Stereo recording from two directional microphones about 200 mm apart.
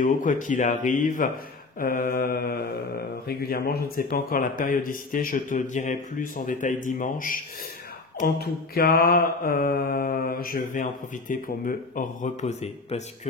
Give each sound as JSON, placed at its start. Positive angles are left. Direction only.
{"t": 0.0, "sound": "a man's voice", "side_deg": 40}
{"t": 1.8, "sound": "mantra", "side_deg": 45}
{"t": 4.1, "sound": "a man's voice", "side_deg": 45}
{"t": 8.2, "sound": "mantra", "side_deg": 50}